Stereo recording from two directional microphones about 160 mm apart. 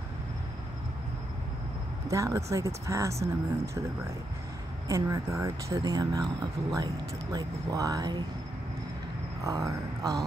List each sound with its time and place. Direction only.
2.0 s speech: 20° right (ahead or behind)
4.8 s speech: 20° right (ahead or behind)
7.3 s speech: 20° right (ahead or behind)
9.4 s speech: 20° right (ahead or behind)